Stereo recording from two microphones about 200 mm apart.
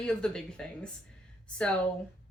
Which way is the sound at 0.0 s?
5° left (ahead or behind).